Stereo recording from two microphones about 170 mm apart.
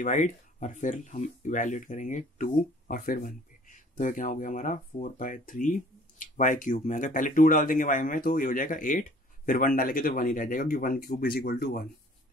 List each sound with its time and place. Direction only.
0.0 s speech: 45° left (ahead or behind); by 11.9 s 65° left (ahead or behind)